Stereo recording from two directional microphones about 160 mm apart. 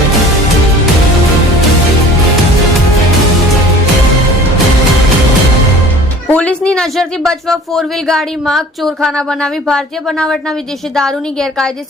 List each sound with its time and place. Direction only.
6.2 s speech: 10° left (ahead or behind)